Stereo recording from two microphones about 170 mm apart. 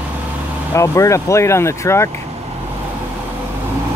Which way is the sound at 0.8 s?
15° left (ahead or behind).